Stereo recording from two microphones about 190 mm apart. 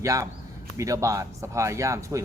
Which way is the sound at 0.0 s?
15° right (ahead or behind).